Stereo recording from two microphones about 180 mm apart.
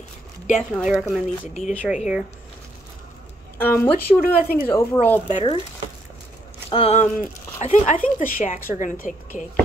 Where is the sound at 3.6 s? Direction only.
10° left (ahead or behind).